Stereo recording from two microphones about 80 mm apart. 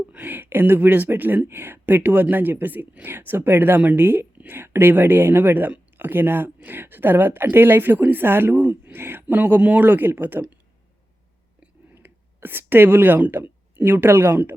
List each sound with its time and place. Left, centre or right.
0.1 s speech: right
11.6 s speech: right